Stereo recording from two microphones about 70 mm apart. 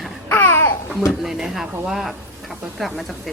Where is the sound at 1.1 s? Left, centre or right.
Centre.